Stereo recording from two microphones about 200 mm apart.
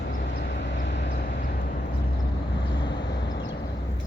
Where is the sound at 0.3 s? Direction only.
60° left (ahead or behind).